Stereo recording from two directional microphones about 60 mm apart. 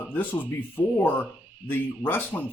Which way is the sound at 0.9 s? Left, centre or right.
Left.